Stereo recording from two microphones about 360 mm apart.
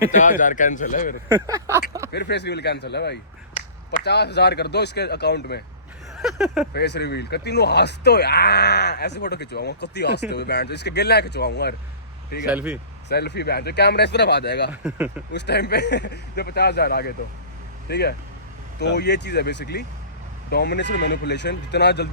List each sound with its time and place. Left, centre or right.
0.1 s speech: left
1.3 s speech: centre
2.1 s speech: left
6.1 s a sound: centre
6.7 s speech: left
12.5 s a sound: centre
13.1 s speech: left
14.7 s a sound: centre
15.3 s speech: left